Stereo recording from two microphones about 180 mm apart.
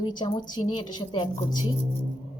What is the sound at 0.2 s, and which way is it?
A woman's voice, 25° left (ahead or behind).